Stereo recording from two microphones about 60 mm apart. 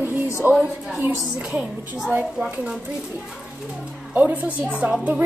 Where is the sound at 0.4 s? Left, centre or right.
Right.